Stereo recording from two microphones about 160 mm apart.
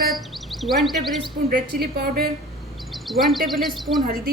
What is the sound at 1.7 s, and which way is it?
Speech, 75° right (ahead or behind).